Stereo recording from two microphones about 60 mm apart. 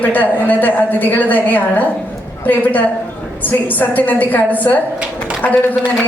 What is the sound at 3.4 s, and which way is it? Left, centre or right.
A woman's voice, left.